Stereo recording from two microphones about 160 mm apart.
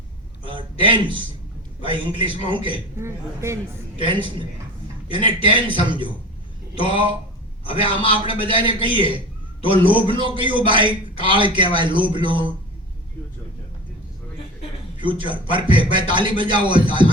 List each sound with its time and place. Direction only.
0.4 s a man's voice: 30° right (ahead or behind)
3.0 s a woman's voice: 15° right (ahead or behind)
3.9 s a man's voice: 30° right (ahead or behind)
6.7 s a man's voice: 30° right (ahead or behind)
14.9 s a man's voice: 30° right (ahead or behind)